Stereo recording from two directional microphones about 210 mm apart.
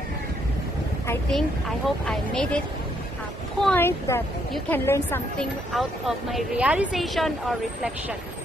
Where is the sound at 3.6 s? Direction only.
10° left (ahead or behind).